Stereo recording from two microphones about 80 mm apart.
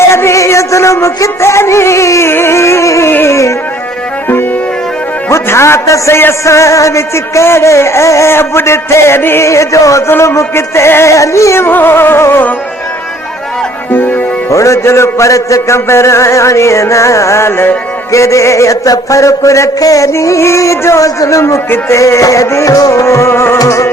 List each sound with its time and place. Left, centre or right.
0.0 s music: left
5.3 s a man's voice: left
13.9 s music: left
14.5 s a man's voice: left